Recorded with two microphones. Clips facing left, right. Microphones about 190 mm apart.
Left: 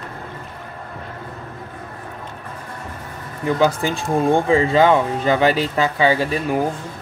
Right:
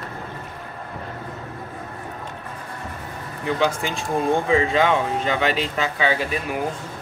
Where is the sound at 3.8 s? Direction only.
40° left (ahead or behind).